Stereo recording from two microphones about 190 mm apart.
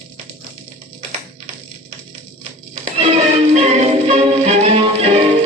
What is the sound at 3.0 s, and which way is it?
Music, 35° right (ahead or behind).